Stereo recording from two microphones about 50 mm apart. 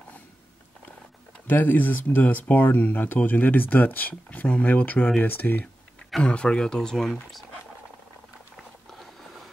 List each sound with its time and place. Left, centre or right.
1.5 s speech: left
6.2 s speech: centre